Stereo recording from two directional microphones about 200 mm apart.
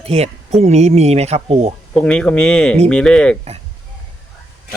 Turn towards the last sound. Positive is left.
turn(degrees=5)  # may be behind; listen again after turning